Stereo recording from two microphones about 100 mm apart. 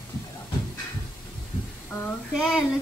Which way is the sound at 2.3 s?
5° right (ahead or behind).